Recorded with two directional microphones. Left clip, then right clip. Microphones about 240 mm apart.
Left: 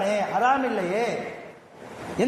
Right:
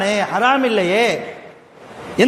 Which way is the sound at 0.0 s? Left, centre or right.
Right.